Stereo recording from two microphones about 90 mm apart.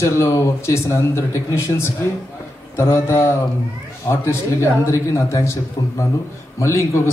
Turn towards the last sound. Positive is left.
turn(degrees=35)  # may be behind; listen again after turning